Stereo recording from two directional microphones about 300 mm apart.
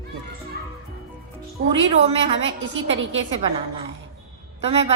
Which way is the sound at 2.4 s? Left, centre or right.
Right.